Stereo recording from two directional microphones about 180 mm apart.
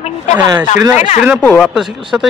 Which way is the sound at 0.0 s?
40° left (ahead or behind).